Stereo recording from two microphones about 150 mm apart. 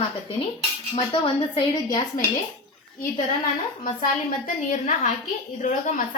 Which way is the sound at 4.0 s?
60° left (ahead or behind).